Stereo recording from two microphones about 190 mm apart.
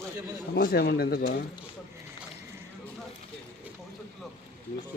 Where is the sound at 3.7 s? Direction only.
10° right (ahead or behind).